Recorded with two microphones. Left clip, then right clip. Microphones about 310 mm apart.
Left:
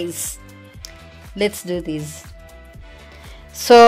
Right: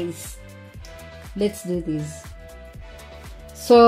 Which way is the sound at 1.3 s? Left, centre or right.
Left.